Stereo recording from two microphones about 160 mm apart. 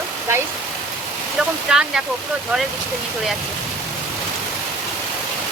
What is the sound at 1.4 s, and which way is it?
Speech, 5° right (ahead or behind).